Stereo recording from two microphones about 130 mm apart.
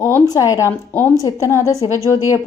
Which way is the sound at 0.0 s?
25° left (ahead or behind).